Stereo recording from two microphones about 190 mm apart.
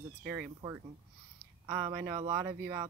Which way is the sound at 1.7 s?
25° right (ahead or behind).